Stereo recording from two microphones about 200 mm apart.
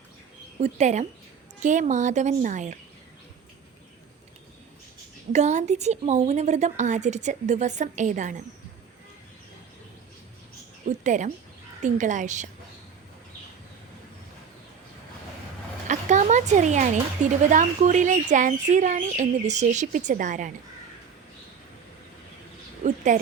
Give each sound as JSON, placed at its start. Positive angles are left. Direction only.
{"t": 0.6, "sound": "speech", "side_deg": -35}
{"t": 5.3, "sound": "speech", "side_deg": -35}
{"t": 10.8, "sound": "speech", "side_deg": -35}
{"t": 15.9, "sound": "speech", "side_deg": -35}
{"t": 22.8, "sound": "a woman's voice", "side_deg": -40}